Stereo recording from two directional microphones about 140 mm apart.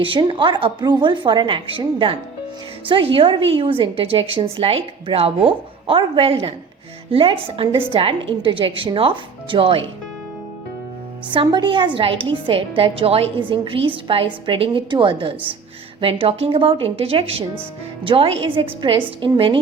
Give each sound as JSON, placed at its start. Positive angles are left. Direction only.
{"t": 0.0, "sound": "a woman's voice", "side_deg": -35}
{"t": 11.3, "sound": "a woman's voice", "side_deg": -35}